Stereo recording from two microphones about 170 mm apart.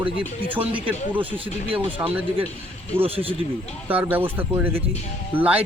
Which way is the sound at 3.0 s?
35° right (ahead or behind).